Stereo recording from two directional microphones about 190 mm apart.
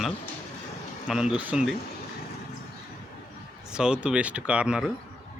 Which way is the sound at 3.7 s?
5° right (ahead or behind).